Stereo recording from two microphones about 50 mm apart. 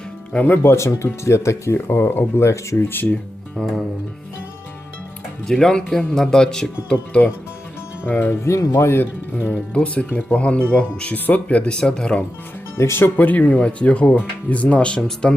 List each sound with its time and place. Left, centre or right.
0.4 s speech: left
2.9 s speech: left
3.6 s speech: centre
5.5 s speech: centre
7.1 s speech: left
8.0 s speech: left
8.4 s speech: left
9.0 s speech: left
9.7 s speech: left
12.7 s speech: left
13.1 s speech: left; by 15.4 s centre